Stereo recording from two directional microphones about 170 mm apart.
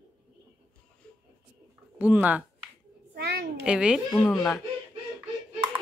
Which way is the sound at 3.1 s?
70° right (ahead or behind).